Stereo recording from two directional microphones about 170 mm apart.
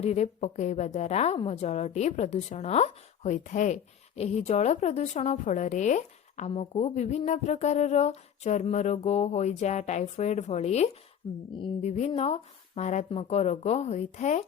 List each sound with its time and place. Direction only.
0.0 s speech: 40° left (ahead or behind)